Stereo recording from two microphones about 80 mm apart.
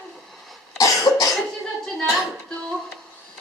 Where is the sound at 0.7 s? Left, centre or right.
Left.